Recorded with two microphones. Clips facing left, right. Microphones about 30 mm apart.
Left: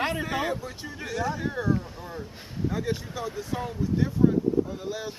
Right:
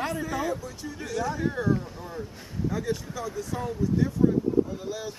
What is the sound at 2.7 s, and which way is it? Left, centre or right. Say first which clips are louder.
Speech: right 1 dB; left.